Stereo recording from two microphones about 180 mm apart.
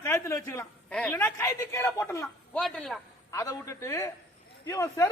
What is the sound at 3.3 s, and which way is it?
A woman's voice, 20° left (ahead or behind).